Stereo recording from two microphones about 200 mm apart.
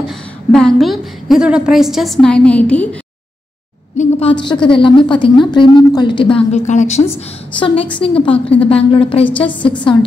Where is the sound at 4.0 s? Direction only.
30° left (ahead or behind).